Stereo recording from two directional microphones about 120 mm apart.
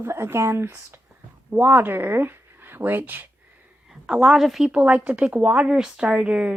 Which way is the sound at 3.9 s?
5° right (ahead or behind).